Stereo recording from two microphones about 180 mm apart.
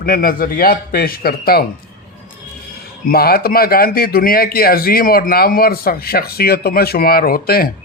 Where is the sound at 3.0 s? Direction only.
55° left (ahead or behind).